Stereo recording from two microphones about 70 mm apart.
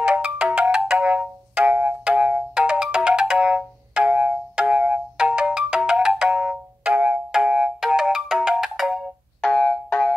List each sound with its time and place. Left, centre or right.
0.0 s ringtone: centre
2.0 s ringtone: centre
4.1 s doorbell: right
4.6 s ringtone: centre
6.3 s music: right
7.8 s ringtone: centre
9.8 s music: centre